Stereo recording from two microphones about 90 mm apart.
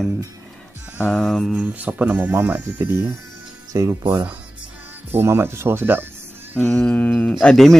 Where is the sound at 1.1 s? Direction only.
10° left (ahead or behind).